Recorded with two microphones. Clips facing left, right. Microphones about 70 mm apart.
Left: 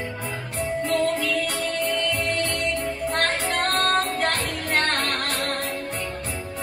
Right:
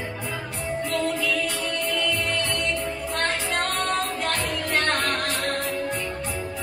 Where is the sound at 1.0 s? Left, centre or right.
Left.